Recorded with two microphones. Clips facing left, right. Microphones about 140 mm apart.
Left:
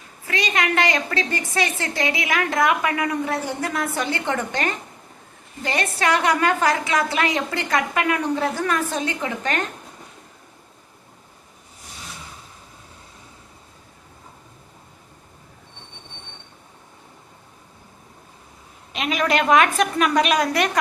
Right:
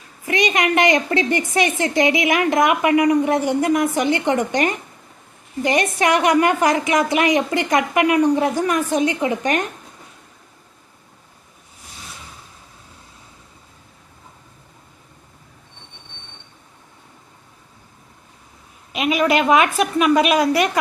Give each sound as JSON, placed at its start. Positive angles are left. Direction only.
{"t": 0.3, "sound": "a woman's voice", "side_deg": -20}
{"t": 18.9, "sound": "a woman's voice", "side_deg": -10}